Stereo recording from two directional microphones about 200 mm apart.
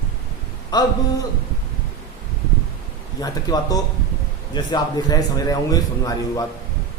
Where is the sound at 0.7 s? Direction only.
20° left (ahead or behind).